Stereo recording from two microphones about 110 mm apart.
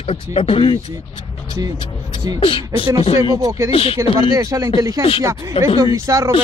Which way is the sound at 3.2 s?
30° right (ahead or behind).